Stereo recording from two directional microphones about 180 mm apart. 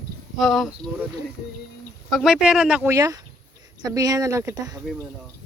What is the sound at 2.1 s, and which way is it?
Speech, centre (ahead or behind).